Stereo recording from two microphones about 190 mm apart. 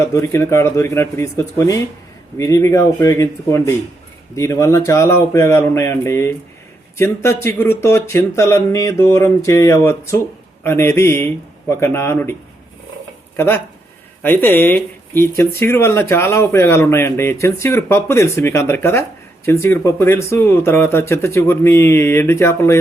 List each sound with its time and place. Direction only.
0.0 s speech: 15° left (ahead or behind)